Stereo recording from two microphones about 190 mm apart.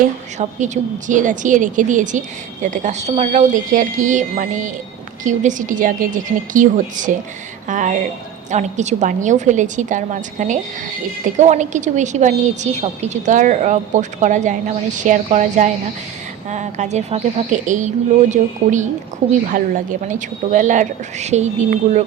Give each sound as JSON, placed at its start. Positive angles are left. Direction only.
{"t": 0.3, "sound": "a woman's voice", "side_deg": -40}